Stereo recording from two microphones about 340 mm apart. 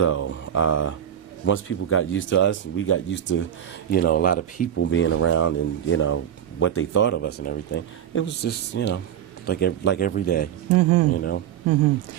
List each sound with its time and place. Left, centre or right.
0.0 s speech: left
4.7 s speech: left
10.8 s speech: right
11.1 s speech: left